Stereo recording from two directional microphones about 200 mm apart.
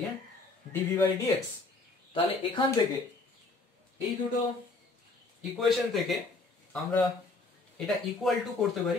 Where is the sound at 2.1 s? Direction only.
25° left (ahead or behind).